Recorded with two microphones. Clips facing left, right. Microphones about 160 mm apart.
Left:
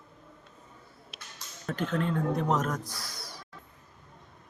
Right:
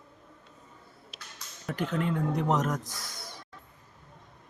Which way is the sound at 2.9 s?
45° right (ahead or behind).